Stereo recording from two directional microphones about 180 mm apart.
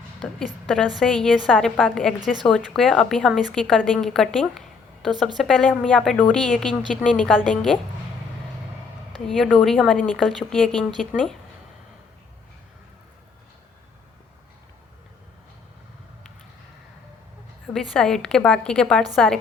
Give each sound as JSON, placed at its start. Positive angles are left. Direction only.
{"t": 0.2, "sound": "a woman's voice", "side_deg": 5}
{"t": 9.2, "sound": "a woman's voice", "side_deg": 0}
{"t": 17.9, "sound": "a woman's voice", "side_deg": 5}